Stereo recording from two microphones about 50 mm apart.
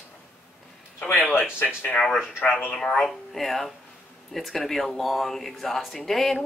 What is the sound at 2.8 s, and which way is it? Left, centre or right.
Speech, centre.